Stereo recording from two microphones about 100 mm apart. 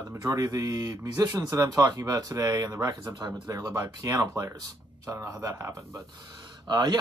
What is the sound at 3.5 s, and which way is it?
Speech, 40° right (ahead or behind).